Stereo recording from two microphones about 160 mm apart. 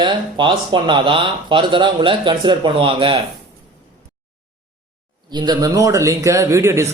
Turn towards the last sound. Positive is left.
turn(degrees=-20)  # may be behind; listen again after turning